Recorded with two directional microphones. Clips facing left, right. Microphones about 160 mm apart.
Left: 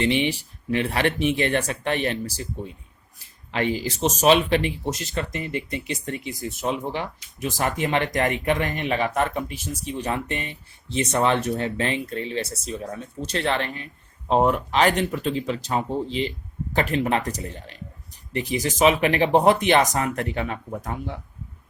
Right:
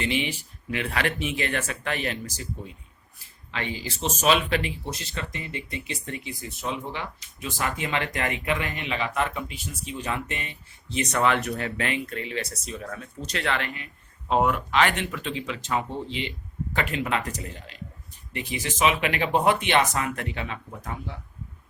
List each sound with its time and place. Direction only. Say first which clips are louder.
0.3 s speech: left 7 dB; 35° left (ahead or behind)
3.5 s speech: left 8 dB; 40° left (ahead or behind)